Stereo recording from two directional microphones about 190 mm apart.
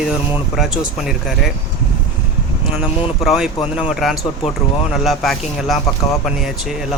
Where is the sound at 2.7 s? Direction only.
5° right (ahead or behind).